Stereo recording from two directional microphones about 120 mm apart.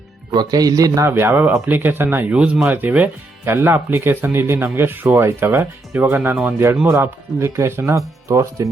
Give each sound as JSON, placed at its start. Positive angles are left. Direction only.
{"t": 0.3, "sound": "speech", "side_deg": -35}